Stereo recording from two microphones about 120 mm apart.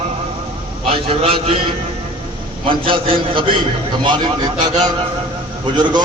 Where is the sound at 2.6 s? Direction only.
45° right (ahead or behind).